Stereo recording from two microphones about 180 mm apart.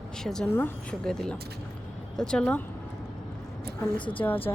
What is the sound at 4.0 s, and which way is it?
Speech, 30° left (ahead or behind).